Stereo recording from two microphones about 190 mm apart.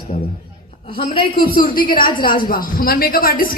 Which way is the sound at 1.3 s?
50° left (ahead or behind).